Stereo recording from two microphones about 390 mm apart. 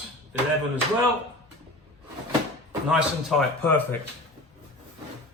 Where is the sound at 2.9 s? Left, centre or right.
Centre.